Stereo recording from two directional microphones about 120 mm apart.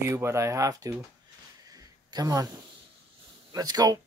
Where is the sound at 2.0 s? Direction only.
30° right (ahead or behind).